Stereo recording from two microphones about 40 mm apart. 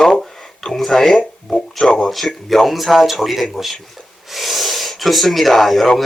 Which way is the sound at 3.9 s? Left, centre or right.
Centre.